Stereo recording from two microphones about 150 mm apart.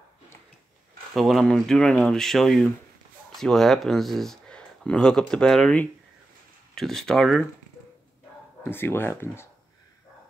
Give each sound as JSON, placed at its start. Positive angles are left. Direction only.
{"t": 1.1, "sound": "speech", "side_deg": 0}
{"t": 8.6, "sound": "speech", "side_deg": 15}